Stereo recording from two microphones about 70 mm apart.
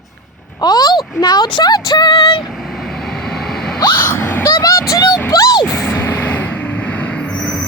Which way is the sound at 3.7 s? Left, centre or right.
Left.